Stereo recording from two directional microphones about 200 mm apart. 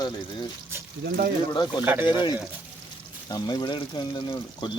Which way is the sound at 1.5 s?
20° left (ahead or behind).